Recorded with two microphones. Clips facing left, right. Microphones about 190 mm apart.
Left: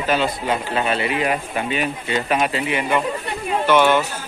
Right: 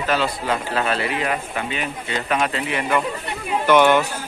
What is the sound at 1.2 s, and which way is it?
Speech, 20° left (ahead or behind).